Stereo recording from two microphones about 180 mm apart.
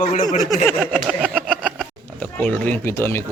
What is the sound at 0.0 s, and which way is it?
Speech, 45° left (ahead or behind).